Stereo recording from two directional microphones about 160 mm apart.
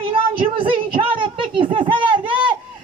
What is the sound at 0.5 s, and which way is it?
Music, 35° right (ahead or behind).